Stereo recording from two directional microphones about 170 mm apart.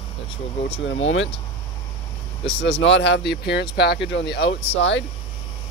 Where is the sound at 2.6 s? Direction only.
90° left.